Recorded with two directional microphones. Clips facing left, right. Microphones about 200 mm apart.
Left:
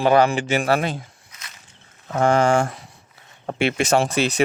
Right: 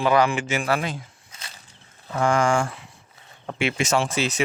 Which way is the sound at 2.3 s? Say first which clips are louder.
Left 3 dB; 35° left (ahead or behind).